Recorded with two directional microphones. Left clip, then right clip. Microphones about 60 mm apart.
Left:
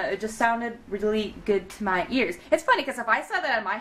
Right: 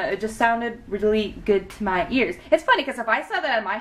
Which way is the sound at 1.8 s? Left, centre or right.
Centre.